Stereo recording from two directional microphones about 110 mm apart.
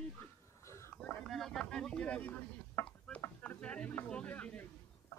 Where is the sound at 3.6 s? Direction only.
10° left (ahead or behind).